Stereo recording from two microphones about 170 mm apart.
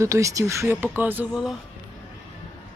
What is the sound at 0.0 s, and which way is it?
Speech, 20° right (ahead or behind).